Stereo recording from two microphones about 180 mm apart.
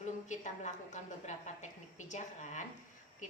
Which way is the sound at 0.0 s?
40° left (ahead or behind).